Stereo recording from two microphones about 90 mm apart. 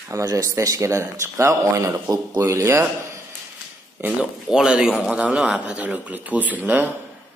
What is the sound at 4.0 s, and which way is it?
Speech, 20° right (ahead or behind).